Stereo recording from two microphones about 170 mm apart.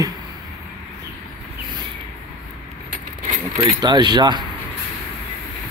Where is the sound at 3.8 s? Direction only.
25° right (ahead or behind).